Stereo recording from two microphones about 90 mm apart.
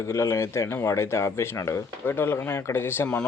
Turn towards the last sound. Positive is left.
turn(degrees=25)  # may be behind; listen again after turning